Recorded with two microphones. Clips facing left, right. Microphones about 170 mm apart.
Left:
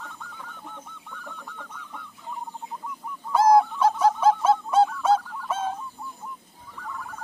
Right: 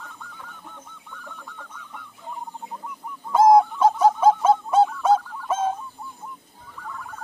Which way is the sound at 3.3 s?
15° right (ahead or behind).